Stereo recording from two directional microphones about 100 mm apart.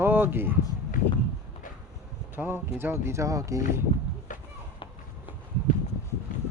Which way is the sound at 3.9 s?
70° left (ahead or behind).